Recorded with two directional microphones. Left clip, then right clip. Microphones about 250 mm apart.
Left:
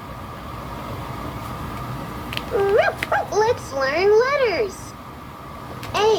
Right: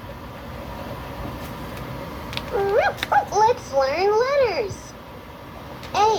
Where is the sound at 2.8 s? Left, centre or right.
Centre.